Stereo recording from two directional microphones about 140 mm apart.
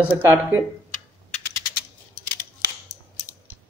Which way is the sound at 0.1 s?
15° right (ahead or behind).